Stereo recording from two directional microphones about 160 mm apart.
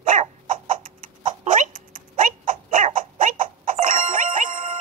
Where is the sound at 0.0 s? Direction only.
50° right (ahead or behind).